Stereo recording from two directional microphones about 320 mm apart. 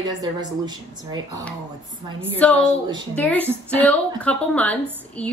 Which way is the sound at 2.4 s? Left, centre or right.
Centre.